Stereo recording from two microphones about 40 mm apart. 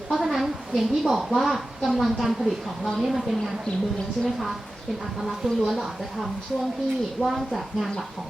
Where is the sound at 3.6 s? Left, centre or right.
Left.